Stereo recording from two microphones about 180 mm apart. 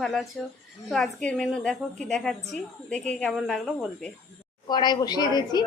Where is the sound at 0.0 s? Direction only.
Centre (ahead or behind).